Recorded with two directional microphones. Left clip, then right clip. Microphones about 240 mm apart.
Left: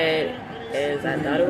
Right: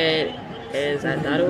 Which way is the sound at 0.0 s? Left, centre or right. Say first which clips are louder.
Right 1 dB; centre.